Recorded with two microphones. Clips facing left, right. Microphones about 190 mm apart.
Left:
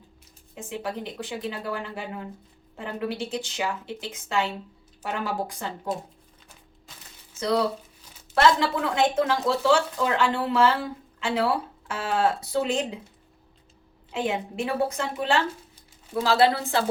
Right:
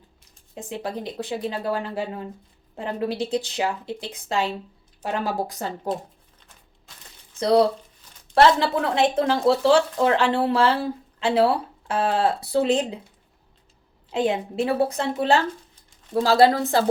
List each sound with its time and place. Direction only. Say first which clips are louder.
0.5 s speech: right 2 dB; 35° right (ahead or behind)
7.3 s speech: right 6 dB; 35° right (ahead or behind)
14.1 s speech: right 5 dB; 35° right (ahead or behind)